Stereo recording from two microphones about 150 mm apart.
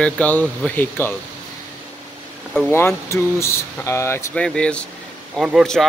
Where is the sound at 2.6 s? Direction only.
15° left (ahead or behind).